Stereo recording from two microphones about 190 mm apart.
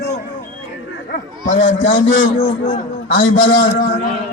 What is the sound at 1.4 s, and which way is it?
Speech, 45° left (ahead or behind).